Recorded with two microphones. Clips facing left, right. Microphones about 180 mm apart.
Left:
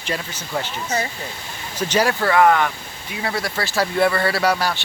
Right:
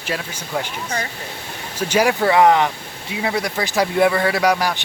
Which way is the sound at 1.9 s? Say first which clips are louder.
Right 3 dB; 15° right (ahead or behind).